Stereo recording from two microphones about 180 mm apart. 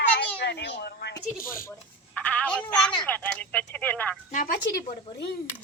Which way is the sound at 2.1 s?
10° left (ahead or behind).